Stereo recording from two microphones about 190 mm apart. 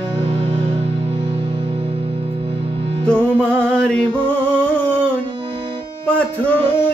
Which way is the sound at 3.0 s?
5° left (ahead or behind).